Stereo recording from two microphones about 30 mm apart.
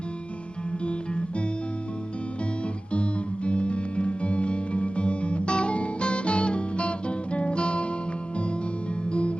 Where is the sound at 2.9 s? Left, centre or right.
Left.